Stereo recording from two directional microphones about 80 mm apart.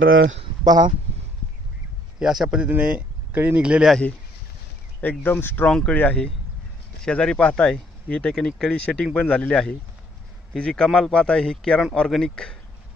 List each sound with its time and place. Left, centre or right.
0.7 s speech: right
2.1 s speech: centre
2.8 s speech: centre
5.2 s speech: left
5.7 s speech: centre